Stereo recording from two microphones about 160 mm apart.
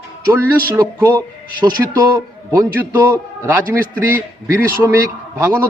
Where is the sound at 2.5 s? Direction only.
10° right (ahead or behind).